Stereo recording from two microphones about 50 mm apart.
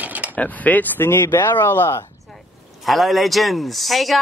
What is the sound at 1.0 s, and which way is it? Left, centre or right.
Speech, left.